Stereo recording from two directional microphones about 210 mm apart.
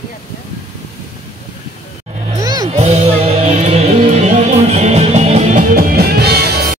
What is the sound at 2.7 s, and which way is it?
Music, 30° right (ahead or behind).